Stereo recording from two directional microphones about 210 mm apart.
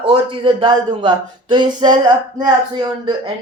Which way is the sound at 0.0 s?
25° right (ahead or behind).